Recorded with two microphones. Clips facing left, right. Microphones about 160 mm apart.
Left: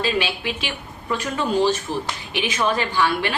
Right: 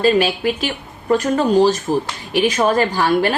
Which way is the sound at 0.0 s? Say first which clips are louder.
Right 8 dB; 45° right (ahead or behind).